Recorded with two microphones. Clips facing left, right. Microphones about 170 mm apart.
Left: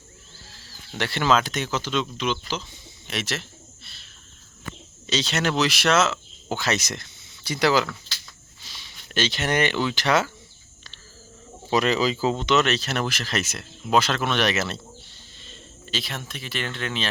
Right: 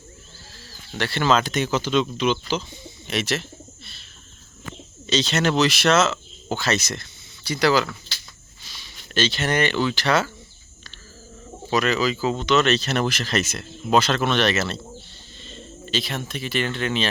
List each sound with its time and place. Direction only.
0.9 s speech: 15° left (ahead or behind); by 3.4 s centre (ahead or behind)
5.0 s speech: 10° left (ahead or behind)
9.1 s speech: 15° left (ahead or behind)
11.7 s speech: 30° left (ahead or behind); by 17.1 s centre (ahead or behind)